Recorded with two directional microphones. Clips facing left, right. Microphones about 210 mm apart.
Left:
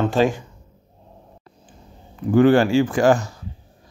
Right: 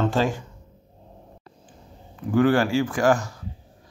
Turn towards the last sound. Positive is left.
turn(degrees=25)  # may be behind; listen again after turning